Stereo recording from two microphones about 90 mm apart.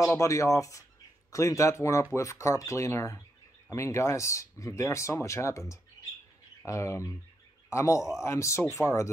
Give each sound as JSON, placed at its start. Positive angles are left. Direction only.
{"t": 0.1, "sound": "speech", "side_deg": 35}
{"t": 6.6, "sound": "a man's voice", "side_deg": 35}